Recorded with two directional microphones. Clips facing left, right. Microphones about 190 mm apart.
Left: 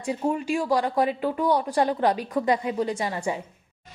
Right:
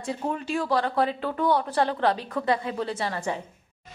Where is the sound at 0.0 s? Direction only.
10° left (ahead or behind).